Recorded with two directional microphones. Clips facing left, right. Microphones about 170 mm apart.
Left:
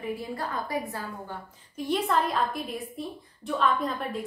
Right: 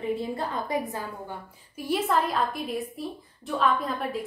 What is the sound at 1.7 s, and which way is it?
A woman's voice, 5° right (ahead or behind).